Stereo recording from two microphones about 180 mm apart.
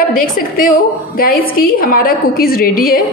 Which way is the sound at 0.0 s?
50° left (ahead or behind).